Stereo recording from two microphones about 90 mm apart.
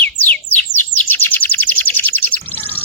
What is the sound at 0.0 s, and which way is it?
Bird, 20° left (ahead or behind).